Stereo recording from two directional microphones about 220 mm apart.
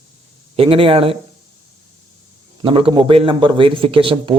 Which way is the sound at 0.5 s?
25° right (ahead or behind).